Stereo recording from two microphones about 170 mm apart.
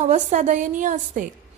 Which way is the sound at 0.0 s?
45° right (ahead or behind).